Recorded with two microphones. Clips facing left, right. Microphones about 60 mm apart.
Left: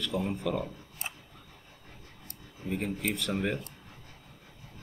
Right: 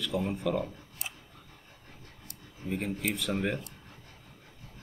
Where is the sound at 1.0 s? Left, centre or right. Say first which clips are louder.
Left 2 dB; left.